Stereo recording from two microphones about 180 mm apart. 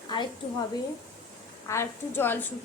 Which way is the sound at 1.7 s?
15° left (ahead or behind).